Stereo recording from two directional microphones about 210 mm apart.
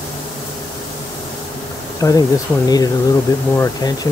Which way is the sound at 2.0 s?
15° left (ahead or behind).